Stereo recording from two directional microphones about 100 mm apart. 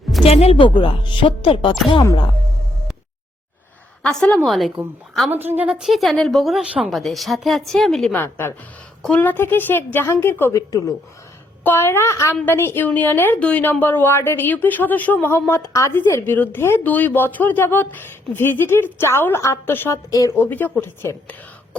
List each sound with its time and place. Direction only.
0.3 s speech: 85° left; by 1.7 s 60° left (ahead or behind)
4.0 s a woman's voice: 10° left (ahead or behind)
5.3 s a woman's voice: 20° right (ahead or behind); by 8.1 s 5° left (ahead or behind)
8.1 s a woman's voice: 20° left (ahead or behind)
10.5 s a woman's voice: 35° left (ahead or behind)
11.6 s a woman's voice: 25° left (ahead or behind)
20.1 s a woman's voice: 35° left (ahead or behind)
20.4 s a woman's voice: 20° left (ahead or behind)